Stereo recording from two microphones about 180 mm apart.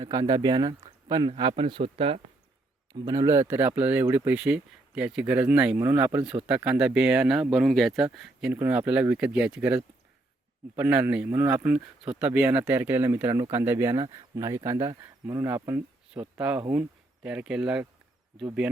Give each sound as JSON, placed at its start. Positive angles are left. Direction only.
{"t": 0.0, "sound": "speech", "side_deg": -20}
{"t": 2.9, "sound": "speech", "side_deg": -20}